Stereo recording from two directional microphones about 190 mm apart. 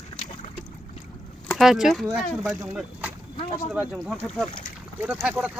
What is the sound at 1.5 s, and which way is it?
Speech, centre (ahead or behind).